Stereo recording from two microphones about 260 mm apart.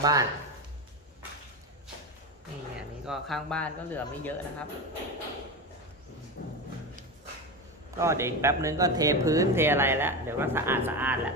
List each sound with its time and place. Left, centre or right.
0.0 s speech: centre
3.1 s speech: centre
6.4 s music: left
7.9 s speech: centre